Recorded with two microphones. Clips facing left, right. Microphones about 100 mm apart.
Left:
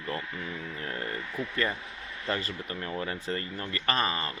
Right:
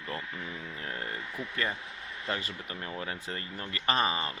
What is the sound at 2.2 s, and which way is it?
Speech, 10° right (ahead or behind).